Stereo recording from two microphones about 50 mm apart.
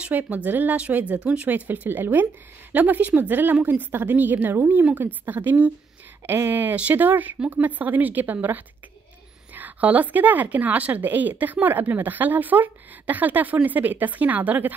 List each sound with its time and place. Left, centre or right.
0.1 s a woman's voice: right
2.7 s a woman's voice: right
6.2 s speech: right
6.6 s a woman's voice: right
7.3 s speech: centre
7.6 s a woman's voice: right